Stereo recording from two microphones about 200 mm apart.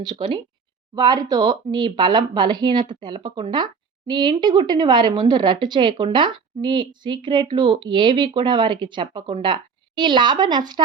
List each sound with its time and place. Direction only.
0.0 s a woman's voice: 25° right (ahead or behind)